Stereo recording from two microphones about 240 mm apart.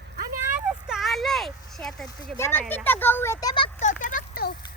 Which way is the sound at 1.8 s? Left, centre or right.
Centre.